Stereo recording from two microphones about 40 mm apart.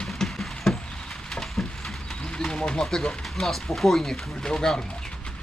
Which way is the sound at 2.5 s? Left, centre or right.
Centre.